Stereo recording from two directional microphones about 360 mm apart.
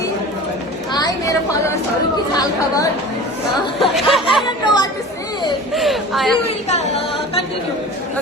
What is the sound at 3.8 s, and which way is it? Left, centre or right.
Speech, centre.